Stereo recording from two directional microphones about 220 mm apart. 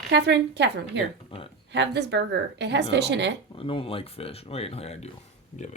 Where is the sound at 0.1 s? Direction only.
50° right (ahead or behind).